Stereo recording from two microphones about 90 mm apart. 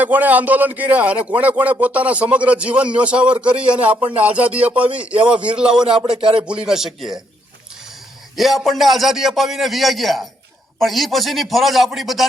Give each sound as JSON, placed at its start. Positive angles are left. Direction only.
{"t": 0.0, "sound": "a man's voice", "side_deg": -20}
{"t": 8.4, "sound": "a man's voice", "side_deg": 0}